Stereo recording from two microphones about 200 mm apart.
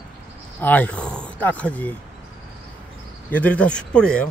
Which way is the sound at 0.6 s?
10° left (ahead or behind).